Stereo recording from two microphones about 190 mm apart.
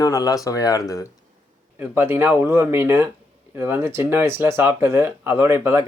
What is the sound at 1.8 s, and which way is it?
Speech, 10° right (ahead or behind).